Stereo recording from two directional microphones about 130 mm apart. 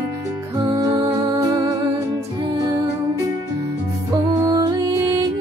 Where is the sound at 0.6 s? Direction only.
30° right (ahead or behind).